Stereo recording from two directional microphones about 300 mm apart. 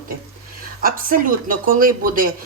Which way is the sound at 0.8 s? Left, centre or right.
Right.